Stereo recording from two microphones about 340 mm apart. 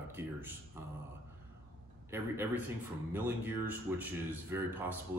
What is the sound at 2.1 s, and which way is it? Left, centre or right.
Speech, centre.